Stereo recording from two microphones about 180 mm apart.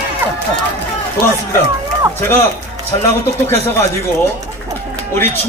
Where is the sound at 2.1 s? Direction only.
15° left (ahead or behind).